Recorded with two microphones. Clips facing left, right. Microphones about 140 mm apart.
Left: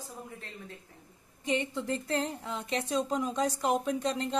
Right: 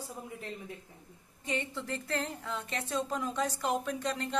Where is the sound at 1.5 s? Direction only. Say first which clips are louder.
Left 5 dB; 20° left (ahead or behind).